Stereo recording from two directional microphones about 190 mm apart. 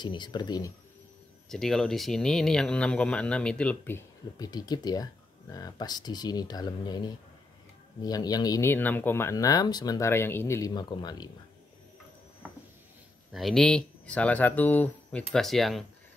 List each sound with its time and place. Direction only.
0.0 s speech: 25° left (ahead or behind)
1.5 s speech: centre (ahead or behind); by 11.2 s 25° left (ahead or behind)
13.3 s speech: centre (ahead or behind)